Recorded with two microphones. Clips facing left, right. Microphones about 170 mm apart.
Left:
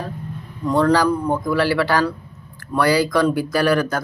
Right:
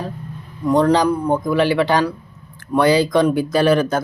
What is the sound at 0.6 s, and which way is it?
Speech, 15° right (ahead or behind).